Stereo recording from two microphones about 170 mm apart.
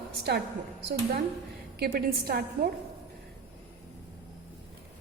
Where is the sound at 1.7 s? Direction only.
65° right (ahead or behind).